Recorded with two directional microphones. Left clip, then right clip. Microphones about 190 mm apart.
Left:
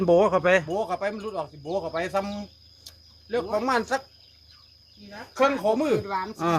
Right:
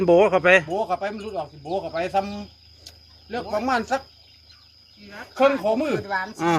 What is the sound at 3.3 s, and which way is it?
Speech, 15° left (ahead or behind).